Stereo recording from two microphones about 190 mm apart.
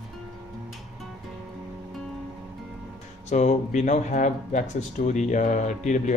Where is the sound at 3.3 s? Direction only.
40° left (ahead or behind).